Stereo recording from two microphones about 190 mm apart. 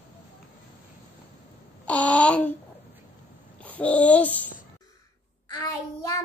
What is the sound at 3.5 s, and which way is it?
Speech, 5° left (ahead or behind).